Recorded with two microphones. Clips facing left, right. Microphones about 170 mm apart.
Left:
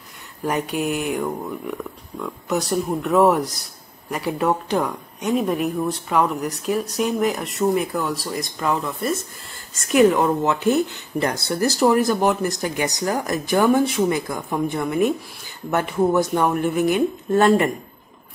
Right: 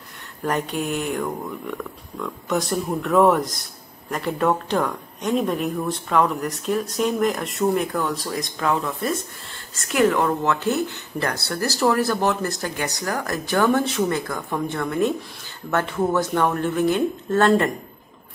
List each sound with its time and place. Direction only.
0.4 s speech: 10° left (ahead or behind)
9.8 s speech: 15° left (ahead or behind)